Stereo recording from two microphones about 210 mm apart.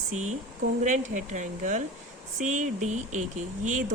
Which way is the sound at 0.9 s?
35° right (ahead or behind).